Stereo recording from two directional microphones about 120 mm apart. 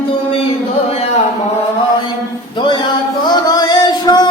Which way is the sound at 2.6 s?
40° left (ahead or behind).